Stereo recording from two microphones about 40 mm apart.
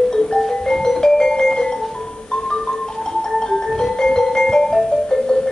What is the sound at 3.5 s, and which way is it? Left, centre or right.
Music, centre.